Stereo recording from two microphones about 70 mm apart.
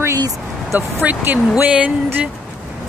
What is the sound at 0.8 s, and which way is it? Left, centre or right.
Speech, right.